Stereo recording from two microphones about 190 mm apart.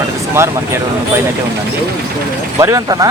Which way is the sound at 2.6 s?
15° right (ahead or behind).